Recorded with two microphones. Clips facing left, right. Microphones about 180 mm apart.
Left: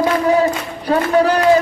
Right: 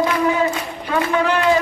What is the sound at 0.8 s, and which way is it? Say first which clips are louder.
Speech: left 5 dB; 40° left (ahead or behind).